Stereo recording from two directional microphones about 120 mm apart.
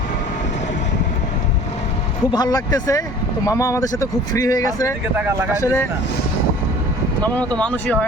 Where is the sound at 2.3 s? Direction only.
35° left (ahead or behind).